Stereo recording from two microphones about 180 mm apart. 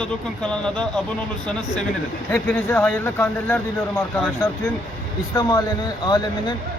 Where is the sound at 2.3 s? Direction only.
10° left (ahead or behind).